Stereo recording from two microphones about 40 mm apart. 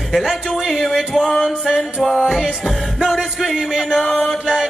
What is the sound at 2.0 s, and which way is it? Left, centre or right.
Music, centre.